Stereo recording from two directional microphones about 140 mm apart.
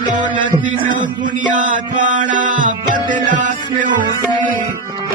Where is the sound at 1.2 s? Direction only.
65° right (ahead or behind).